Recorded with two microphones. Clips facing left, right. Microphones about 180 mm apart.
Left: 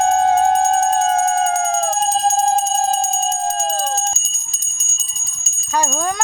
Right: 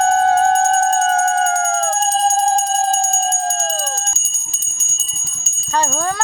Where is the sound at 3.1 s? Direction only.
5° left (ahead or behind).